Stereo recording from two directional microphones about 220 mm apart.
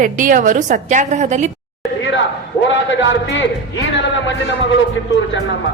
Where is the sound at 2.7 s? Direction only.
55° left (ahead or behind).